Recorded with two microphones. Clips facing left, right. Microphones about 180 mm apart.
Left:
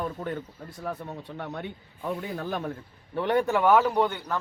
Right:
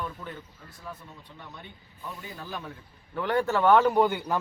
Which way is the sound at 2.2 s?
55° left (ahead or behind).